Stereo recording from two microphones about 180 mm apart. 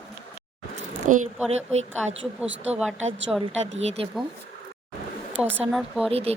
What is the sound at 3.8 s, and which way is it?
Speech, 35° right (ahead or behind).